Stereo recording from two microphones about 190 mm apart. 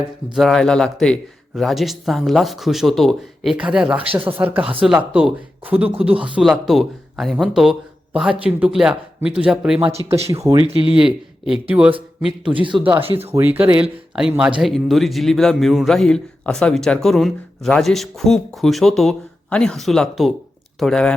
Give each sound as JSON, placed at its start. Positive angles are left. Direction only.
{"t": 0.3, "sound": "a man's voice", "side_deg": 0}
{"t": 3.9, "sound": "speech", "side_deg": -30}
{"t": 4.3, "sound": "a man's voice", "side_deg": -10}
{"t": 10.1, "sound": "speech", "side_deg": -15}
{"t": 10.7, "sound": "speech", "side_deg": -30}
{"t": 10.9, "sound": "a man's voice", "side_deg": -5}
{"t": 12.5, "sound": "speech", "side_deg": -25}
{"t": 13.3, "sound": "a man's voice", "side_deg": -10}